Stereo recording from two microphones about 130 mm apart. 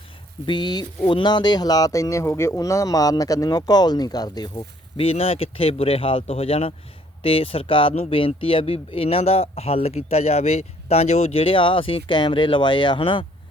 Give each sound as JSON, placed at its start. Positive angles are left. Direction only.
{"t": 0.4, "sound": "speech", "side_deg": 35}
{"t": 4.9, "sound": "speech", "side_deg": 50}